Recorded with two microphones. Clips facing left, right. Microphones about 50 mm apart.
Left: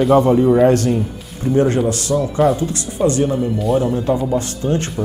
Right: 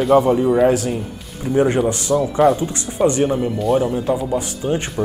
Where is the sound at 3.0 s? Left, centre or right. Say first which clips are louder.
Even; right.